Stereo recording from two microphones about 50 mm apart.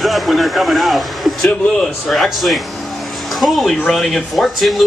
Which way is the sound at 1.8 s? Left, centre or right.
Centre.